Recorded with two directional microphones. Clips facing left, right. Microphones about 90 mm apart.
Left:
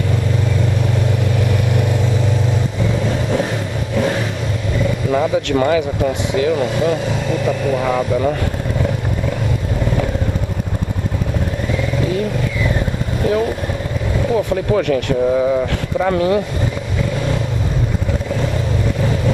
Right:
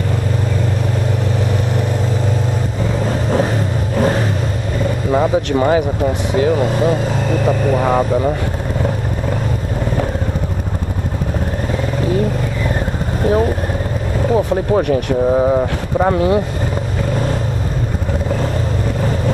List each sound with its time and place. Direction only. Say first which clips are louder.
3.0 s vehicle: right 3 dB; 40° right (ahead or behind)
5.1 s speech: right 2 dB; 35° right (ahead or behind)
12.0 s vehicle: right 4 dB; 40° right (ahead or behind)
14.3 s speech: right 2 dB; 30° right (ahead or behind)
17.1 s vehicle: right 3 dB; 40° right (ahead or behind)